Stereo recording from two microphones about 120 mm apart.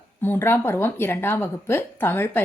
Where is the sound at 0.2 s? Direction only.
20° left (ahead or behind).